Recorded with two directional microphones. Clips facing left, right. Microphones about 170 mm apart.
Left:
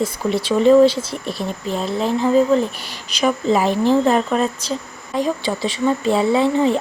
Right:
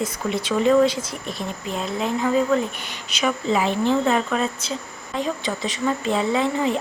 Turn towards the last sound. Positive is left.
turn(degrees=30)  # may be behind; listen again after turning